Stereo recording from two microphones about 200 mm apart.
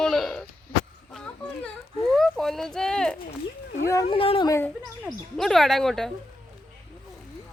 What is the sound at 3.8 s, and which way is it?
Speech, 15° left (ahead or behind).